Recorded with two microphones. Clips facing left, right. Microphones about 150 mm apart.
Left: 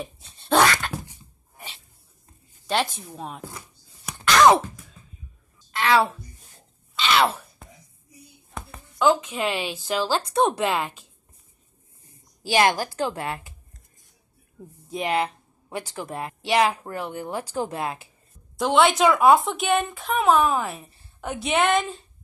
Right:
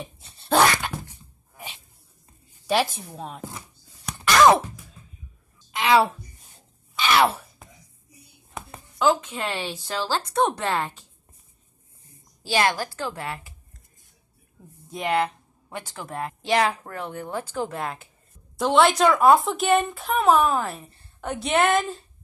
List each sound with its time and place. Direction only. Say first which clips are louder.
0.0 s dog: left 3 dB; centre (ahead or behind)
2.6 s a woman's voice: right 2 dB; 5° right (ahead or behind)
4.0 s a sound: even; centre (ahead or behind)
5.7 s a sound: right 1 dB; 15° right (ahead or behind)
7.1 s a sound: right 1 dB; 10° right (ahead or behind)
8.9 s a woman's voice: left 1 dB; centre (ahead or behind)
12.4 s speech: left 3 dB; 15° left (ahead or behind)
14.9 s a woman's voice: right 1 dB; 15° left (ahead or behind)
17.1 s speech: left 1 dB; 30° left (ahead or behind)
17.6 s a woman's voice: left 2 dB; 15° left (ahead or behind)
18.6 s a woman's voice: even; centre (ahead or behind)